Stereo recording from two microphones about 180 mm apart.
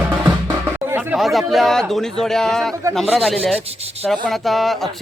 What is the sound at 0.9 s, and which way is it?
Chatter, 10° right (ahead or behind).